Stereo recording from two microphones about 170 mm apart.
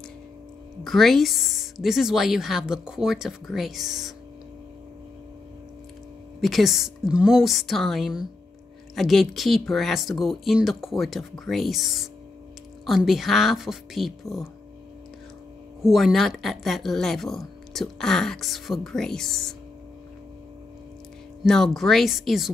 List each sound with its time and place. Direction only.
0.8 s speech: centre (ahead or behind)
6.4 s speech: centre (ahead or behind)
15.8 s speech: centre (ahead or behind)
21.5 s speech: centre (ahead or behind)